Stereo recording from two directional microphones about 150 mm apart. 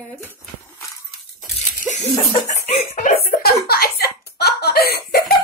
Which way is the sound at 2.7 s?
80° left.